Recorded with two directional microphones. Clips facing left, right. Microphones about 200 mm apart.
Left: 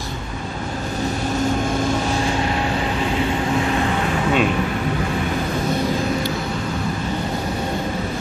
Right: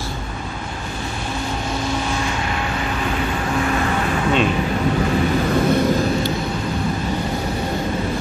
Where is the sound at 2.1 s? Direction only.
30° left (ahead or behind).